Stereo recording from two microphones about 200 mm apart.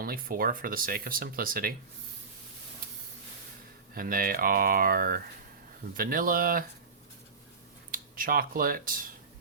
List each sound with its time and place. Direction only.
0.0 s speech: 45° right (ahead or behind)
3.9 s speech: 45° right (ahead or behind)
7.9 s speech: 45° right (ahead or behind)